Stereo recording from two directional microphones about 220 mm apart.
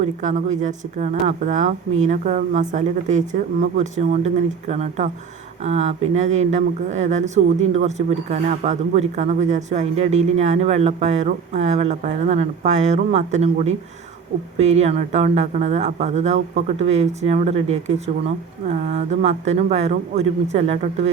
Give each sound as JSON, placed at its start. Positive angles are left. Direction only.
{"t": 0.0, "sound": "speech", "side_deg": -35}